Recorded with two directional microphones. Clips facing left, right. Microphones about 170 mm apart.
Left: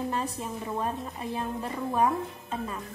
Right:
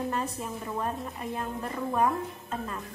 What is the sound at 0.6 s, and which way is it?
A woman's voice, 15° left (ahead or behind).